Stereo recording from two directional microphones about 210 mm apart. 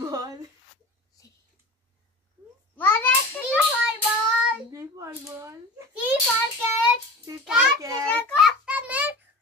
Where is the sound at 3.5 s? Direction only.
5° right (ahead or behind).